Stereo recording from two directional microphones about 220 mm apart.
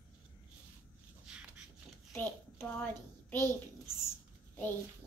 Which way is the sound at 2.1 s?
10° left (ahead or behind).